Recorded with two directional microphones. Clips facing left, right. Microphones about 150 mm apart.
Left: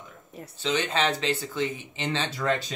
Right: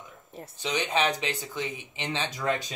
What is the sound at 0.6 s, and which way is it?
Speech, 15° right (ahead or behind).